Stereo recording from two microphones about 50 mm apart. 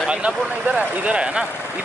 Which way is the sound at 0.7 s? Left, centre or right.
Right.